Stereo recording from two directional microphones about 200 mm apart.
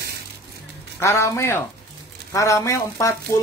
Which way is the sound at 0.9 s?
15° left (ahead or behind).